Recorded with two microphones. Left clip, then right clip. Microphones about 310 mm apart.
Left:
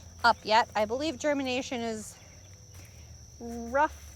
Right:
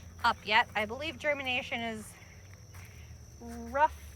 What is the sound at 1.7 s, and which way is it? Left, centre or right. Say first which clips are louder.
Speech: left 2 dB; left.